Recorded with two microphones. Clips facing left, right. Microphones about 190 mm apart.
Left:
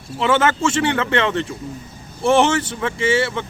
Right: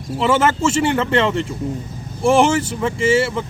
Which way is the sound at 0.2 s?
5° right (ahead or behind).